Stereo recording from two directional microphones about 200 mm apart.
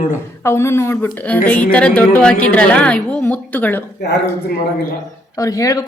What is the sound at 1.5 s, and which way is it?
Music, 5° left (ahead or behind).